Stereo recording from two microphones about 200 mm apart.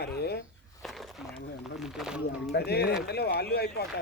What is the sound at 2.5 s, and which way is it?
Speech, 55° left (ahead or behind).